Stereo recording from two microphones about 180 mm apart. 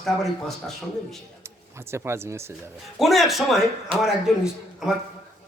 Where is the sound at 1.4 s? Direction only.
15° right (ahead or behind).